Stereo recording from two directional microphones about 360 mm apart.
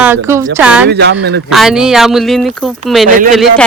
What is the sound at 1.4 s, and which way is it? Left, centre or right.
A woman's voice, centre.